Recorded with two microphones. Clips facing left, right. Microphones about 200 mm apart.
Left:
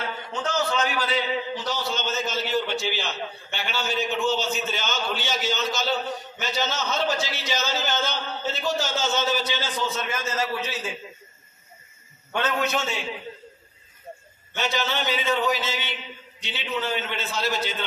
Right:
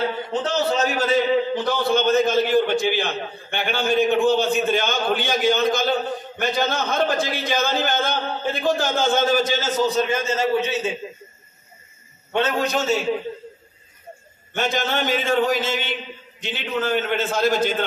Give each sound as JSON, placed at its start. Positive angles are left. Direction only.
{"t": 0.0, "sound": "a man's voice", "side_deg": -35}
{"t": 12.3, "sound": "a man's voice", "side_deg": -25}
{"t": 14.5, "sound": "a man's voice", "side_deg": -50}